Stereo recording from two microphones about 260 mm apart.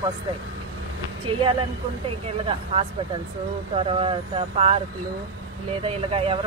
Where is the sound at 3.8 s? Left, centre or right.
Right.